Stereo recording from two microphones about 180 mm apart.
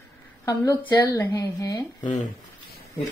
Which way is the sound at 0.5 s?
20° left (ahead or behind).